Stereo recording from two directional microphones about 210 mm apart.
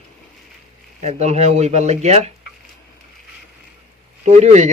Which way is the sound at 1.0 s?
30° right (ahead or behind).